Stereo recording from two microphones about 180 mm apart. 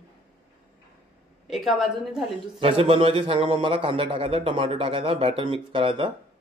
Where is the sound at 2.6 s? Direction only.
30° right (ahead or behind).